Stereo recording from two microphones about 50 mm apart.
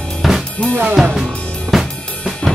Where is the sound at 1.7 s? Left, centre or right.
Centre.